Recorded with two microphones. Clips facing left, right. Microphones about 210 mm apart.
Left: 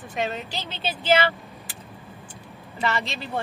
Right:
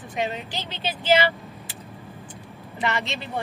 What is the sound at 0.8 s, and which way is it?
Speech, 15° right (ahead or behind).